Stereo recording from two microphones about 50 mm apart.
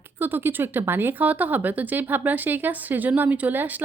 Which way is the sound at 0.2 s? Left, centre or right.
Right.